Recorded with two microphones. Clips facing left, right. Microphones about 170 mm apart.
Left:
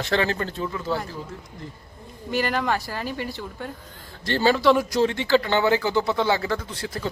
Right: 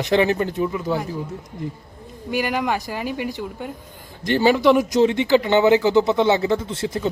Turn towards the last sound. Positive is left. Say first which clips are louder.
# right 7 dB
turn(degrees=-25)  # may be behind; listen again after turning